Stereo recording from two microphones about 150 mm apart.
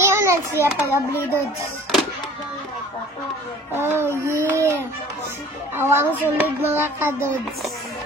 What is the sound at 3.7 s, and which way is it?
Child singing, 15° right (ahead or behind).